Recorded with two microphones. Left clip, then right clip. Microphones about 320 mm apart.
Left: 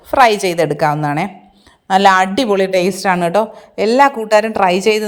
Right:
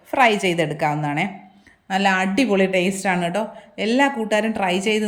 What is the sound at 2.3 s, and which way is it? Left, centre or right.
A woman's voice, centre.